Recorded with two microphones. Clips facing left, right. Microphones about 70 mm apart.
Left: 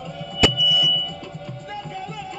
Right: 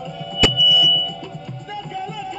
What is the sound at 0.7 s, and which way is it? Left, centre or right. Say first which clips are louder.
Music: right 4 dB; left.